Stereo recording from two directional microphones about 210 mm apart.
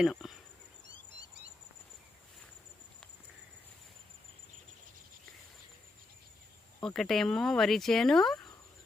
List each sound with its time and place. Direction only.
0.0 s speech: centre (ahead or behind)
6.8 s speech: centre (ahead or behind)